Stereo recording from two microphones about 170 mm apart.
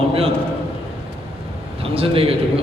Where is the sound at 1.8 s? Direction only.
35° right (ahead or behind).